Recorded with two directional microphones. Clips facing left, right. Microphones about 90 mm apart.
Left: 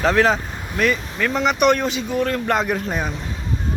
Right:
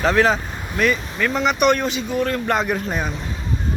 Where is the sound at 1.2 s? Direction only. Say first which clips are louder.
Left 1 dB; 90° left.